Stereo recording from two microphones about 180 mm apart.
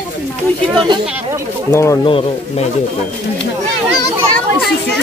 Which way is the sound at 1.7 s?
15° left (ahead or behind).